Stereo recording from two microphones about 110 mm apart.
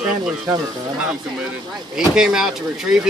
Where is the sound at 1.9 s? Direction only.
5° right (ahead or behind).